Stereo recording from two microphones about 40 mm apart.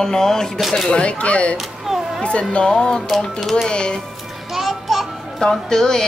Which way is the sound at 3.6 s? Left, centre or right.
Left.